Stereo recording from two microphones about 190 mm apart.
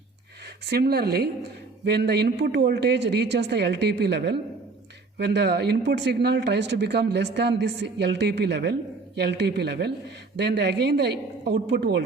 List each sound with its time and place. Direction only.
0.6 s speech: 55° right (ahead or behind)